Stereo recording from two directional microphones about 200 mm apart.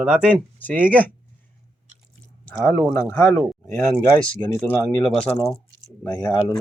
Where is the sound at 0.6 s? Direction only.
10° left (ahead or behind).